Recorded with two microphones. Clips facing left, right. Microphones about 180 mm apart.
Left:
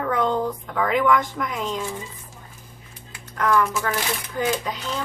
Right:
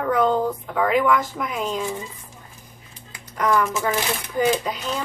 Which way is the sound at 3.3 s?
20° right (ahead or behind).